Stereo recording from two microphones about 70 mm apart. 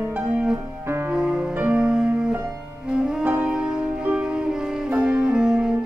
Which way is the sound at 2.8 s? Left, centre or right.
Centre.